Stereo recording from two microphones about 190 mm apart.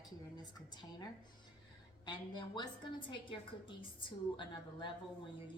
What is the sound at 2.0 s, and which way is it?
A woman's voice, 20° left (ahead or behind).